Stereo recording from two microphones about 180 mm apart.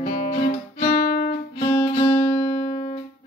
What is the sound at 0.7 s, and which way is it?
Music, 55° left (ahead or behind).